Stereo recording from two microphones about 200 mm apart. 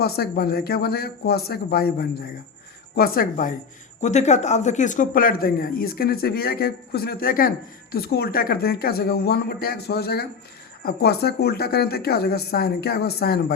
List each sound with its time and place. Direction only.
0.0 s speech: 50° left (ahead or behind)